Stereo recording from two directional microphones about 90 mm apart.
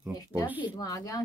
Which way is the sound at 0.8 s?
40° left (ahead or behind).